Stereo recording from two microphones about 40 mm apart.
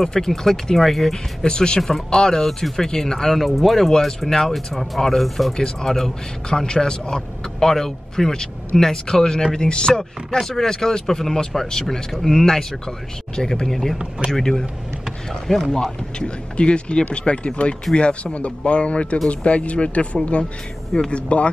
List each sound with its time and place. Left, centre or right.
0.0 s a man's voice: centre
1.4 s a man's voice: left; by 3.9 s centre
4.3 s a man's voice: centre
4.6 s speech: centre
5.6 s a man's voice: centre
10.4 s a man's voice: centre
16.5 s speech: left